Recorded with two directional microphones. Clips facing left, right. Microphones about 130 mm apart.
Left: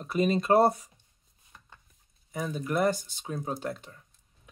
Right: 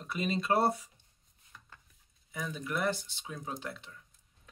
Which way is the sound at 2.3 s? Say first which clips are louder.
Left 7 dB; 40° left (ahead or behind).